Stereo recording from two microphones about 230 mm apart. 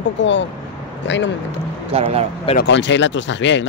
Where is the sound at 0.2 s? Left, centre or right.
Left.